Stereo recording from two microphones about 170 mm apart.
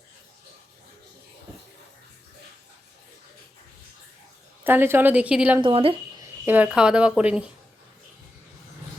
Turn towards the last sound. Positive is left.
turn(degrees=-5)  # may be behind; listen again after turning